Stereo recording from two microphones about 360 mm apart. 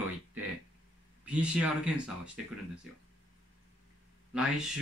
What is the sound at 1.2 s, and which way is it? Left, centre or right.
Speech, centre.